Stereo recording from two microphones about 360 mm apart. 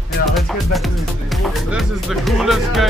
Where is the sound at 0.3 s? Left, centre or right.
Centre.